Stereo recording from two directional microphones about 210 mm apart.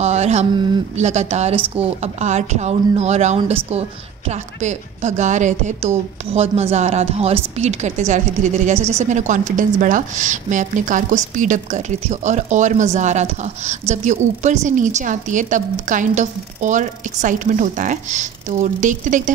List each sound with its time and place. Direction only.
0.0 s a woman's voice: 30° right (ahead or behind)